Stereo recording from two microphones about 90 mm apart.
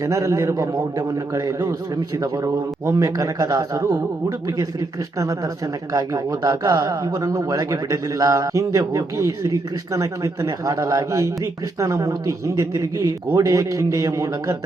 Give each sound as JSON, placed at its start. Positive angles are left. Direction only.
{"t": 0.0, "sound": "a man's voice", "side_deg": -40}
{"t": 2.8, "sound": "a man's voice", "side_deg": -40}
{"t": 5.9, "sound": "a man's voice", "side_deg": -40}